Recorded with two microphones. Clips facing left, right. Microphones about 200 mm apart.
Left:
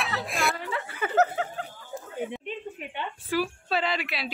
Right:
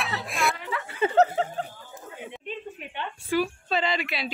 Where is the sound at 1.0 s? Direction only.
30° right (ahead or behind).